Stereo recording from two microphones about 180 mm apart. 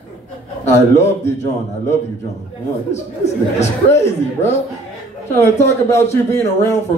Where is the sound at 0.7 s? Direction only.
15° left (ahead or behind).